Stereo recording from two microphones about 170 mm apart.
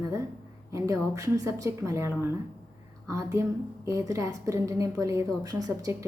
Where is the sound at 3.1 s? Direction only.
15° right (ahead or behind).